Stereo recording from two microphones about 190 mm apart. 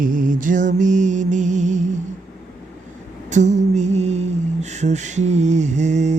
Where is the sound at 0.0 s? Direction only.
45° right (ahead or behind).